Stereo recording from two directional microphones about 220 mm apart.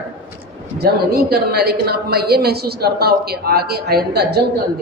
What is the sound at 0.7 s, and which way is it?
A woman's voice, 45° right (ahead or behind).